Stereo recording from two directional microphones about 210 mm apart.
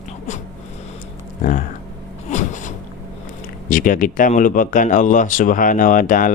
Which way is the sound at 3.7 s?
40° left (ahead or behind).